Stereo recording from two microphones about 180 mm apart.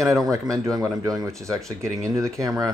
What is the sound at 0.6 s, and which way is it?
Speech, 20° right (ahead or behind).